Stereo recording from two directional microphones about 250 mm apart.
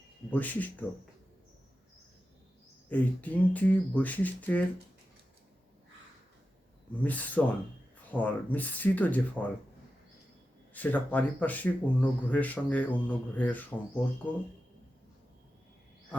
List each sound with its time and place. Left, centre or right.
0.3 s speech: centre
2.9 s speech: centre
7.0 s speech: centre
10.8 s speech: centre